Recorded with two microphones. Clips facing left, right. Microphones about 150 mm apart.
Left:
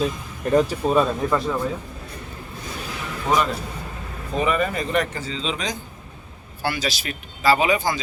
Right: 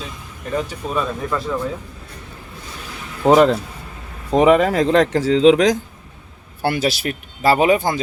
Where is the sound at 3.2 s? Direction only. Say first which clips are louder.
Right 10 dB; 90° right.